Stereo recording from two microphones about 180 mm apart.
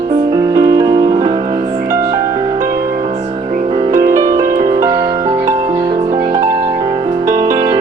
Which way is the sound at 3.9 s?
15° right (ahead or behind).